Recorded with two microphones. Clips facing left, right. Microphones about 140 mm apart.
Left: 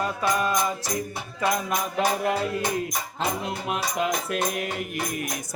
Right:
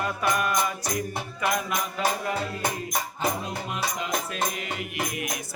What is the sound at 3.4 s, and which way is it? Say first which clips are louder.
Music: left 2 dB; 65° left (ahead or behind).